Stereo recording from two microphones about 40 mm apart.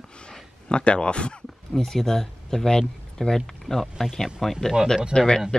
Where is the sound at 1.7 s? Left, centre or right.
Centre.